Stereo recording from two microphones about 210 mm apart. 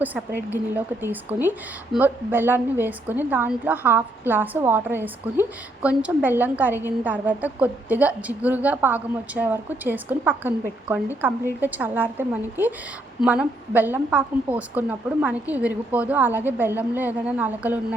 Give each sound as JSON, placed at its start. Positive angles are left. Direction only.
{"t": 0.0, "sound": "speech", "side_deg": -10}